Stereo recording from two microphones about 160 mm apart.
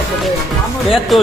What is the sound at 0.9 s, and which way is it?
Speech, 5° right (ahead or behind).